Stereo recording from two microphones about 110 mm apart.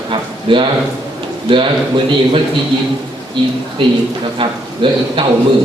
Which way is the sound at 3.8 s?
50° right (ahead or behind).